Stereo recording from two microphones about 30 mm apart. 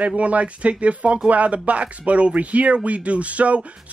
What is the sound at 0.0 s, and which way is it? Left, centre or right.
Speech, right.